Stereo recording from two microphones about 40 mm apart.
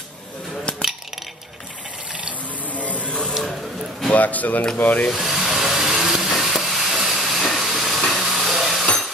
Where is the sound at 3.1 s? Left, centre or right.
Left.